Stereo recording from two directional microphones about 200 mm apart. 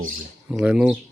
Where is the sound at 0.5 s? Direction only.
5° right (ahead or behind).